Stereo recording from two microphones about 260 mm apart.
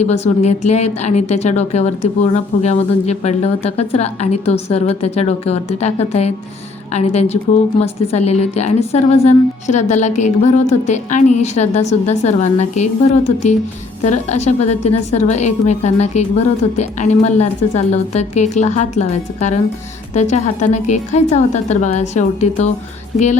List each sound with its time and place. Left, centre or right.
0.0 s a woman's voice: left